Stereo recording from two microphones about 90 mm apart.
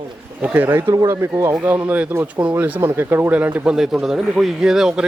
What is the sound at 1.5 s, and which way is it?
Speech, 20° right (ahead or behind).